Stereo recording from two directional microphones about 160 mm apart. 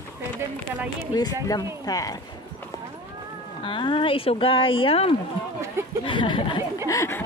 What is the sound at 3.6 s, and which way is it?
Speech, 30° left (ahead or behind).